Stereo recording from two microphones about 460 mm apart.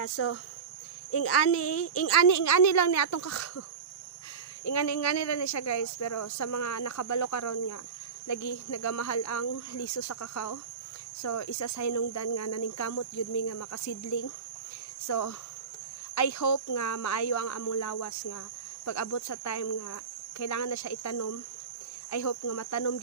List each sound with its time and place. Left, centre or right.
0.0 s speech: left
4.6 s speech: left